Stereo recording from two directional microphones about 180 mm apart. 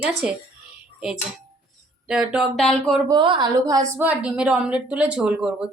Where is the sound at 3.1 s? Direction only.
25° right (ahead or behind).